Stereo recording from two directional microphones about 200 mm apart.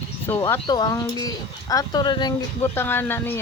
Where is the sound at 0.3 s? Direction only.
10° left (ahead or behind).